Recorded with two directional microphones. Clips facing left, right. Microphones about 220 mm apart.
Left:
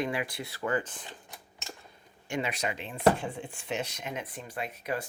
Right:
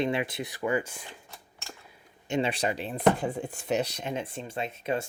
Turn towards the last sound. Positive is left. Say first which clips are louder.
# right 4 dB
turn(degrees=-25)  # may be behind; listen again after turning